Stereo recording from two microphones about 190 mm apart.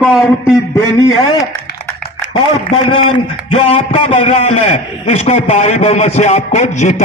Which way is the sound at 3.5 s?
30° left (ahead or behind).